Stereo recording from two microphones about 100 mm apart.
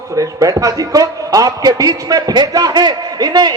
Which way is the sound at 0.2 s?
35° right (ahead or behind).